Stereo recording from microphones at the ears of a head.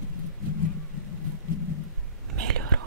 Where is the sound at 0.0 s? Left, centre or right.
Left.